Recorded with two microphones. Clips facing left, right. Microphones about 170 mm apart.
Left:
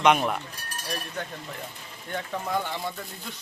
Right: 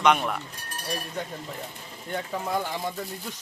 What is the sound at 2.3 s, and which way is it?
Speech, 15° right (ahead or behind).